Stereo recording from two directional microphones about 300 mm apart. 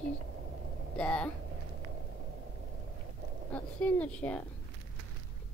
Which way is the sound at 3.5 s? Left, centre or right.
Centre.